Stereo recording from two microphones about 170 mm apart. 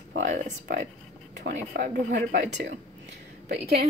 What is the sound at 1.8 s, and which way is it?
Speech, 50° right (ahead or behind).